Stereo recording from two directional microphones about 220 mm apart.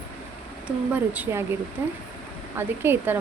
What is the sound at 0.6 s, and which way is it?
Speech, 5° right (ahead or behind).